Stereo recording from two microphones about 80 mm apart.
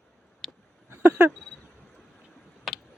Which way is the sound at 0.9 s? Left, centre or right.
Right.